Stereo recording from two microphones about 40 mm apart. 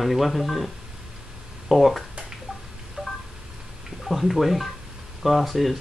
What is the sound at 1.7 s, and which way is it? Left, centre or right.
Speech, centre.